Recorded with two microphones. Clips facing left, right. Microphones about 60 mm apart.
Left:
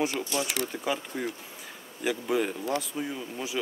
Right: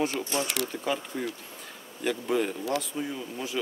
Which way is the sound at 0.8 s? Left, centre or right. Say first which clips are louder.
Even; centre.